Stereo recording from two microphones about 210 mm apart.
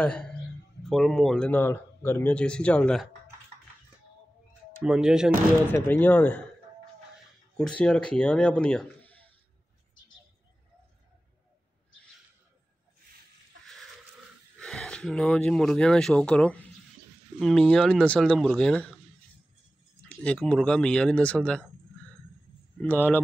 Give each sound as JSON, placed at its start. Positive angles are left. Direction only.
{"t": 0.0, "sound": "speech", "side_deg": 5}
{"t": 4.8, "sound": "speech", "side_deg": -5}
{"t": 5.7, "sound": "speech", "side_deg": 10}
{"t": 7.5, "sound": "speech", "side_deg": 5}
{"t": 14.6, "sound": "speech", "side_deg": 5}
{"t": 20.1, "sound": "speech", "side_deg": 5}
{"t": 22.8, "sound": "speech", "side_deg": 10}